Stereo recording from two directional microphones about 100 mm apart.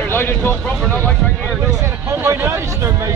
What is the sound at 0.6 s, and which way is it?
Vehicle, 10° left (ahead or behind).